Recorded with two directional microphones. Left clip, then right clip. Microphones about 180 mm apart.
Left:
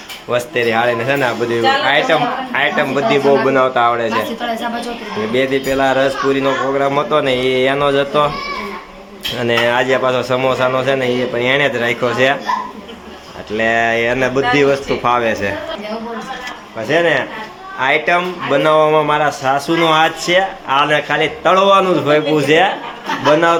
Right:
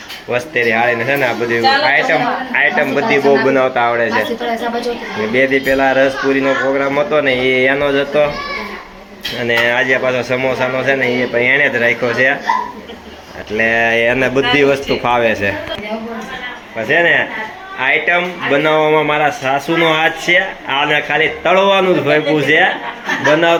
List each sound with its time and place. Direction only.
0.3 s a man's voice: 20° left (ahead or behind)
5.3 s speech: 15° left (ahead or behind)
9.4 s a man's voice: 25° left (ahead or behind)
13.6 s speech: 5° left (ahead or behind)
16.9 s speech: 10° left (ahead or behind)